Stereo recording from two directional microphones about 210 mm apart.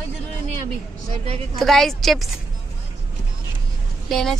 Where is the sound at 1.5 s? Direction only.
Centre (ahead or behind).